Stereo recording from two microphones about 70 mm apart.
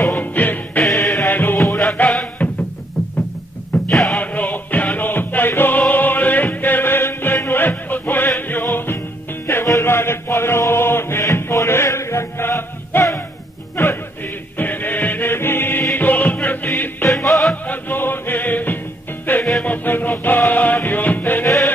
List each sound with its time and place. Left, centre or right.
0.0 s music: left
0.9 s music: left
1.3 s music: left
3.9 s music: centre
4.2 s music: left
9.7 s chant: left
13.7 s music: left
17.1 s music: centre
17.6 s music: left